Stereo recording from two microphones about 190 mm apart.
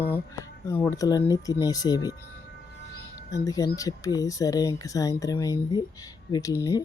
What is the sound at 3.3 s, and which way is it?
Speech, 20° left (ahead or behind).